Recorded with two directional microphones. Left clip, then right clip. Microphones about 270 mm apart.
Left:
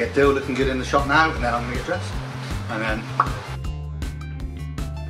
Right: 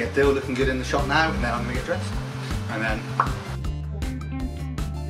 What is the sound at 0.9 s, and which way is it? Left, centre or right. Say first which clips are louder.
Speech: left 7 dB; centre.